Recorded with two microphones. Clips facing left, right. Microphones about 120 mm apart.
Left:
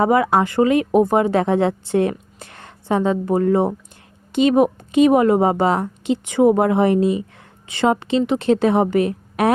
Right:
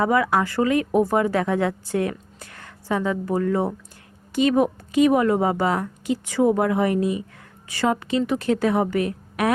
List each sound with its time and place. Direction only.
0.0 s speech: 25° left (ahead or behind)